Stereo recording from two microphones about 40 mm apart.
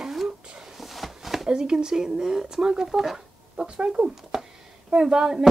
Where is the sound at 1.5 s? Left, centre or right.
Centre.